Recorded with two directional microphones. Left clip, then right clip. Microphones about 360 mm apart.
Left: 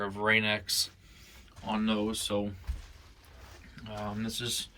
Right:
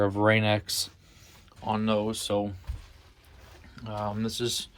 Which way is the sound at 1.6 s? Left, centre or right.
Centre.